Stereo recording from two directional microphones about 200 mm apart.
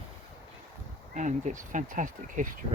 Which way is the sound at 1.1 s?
40° right (ahead or behind).